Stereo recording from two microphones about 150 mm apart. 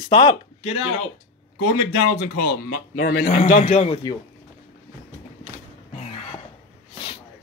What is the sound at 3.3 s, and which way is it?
Speech, 40° left (ahead or behind).